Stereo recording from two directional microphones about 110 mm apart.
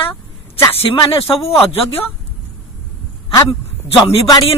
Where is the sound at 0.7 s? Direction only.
60° left (ahead or behind).